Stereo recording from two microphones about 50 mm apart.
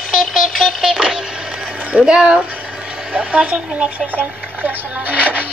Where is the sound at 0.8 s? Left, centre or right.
Centre.